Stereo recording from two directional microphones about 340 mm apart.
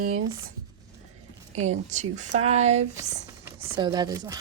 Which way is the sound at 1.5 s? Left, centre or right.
Centre.